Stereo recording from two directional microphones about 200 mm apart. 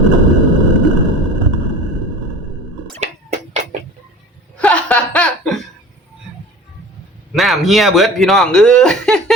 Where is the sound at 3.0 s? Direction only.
35° right (ahead or behind).